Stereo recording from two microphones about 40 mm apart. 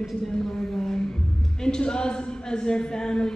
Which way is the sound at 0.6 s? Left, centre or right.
Left.